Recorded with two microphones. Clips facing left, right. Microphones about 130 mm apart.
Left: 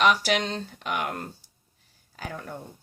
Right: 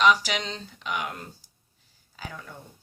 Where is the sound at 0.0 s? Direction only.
55° left (ahead or behind).